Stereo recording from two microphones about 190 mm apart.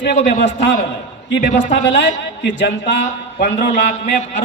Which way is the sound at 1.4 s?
40° left (ahead or behind).